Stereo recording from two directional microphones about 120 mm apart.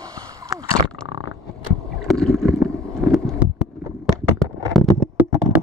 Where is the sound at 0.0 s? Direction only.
30° right (ahead or behind).